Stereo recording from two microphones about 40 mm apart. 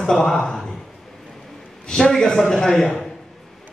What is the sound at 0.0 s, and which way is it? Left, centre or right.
Speech, centre.